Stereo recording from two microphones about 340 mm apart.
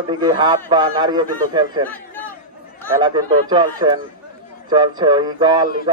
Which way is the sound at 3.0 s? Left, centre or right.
Centre.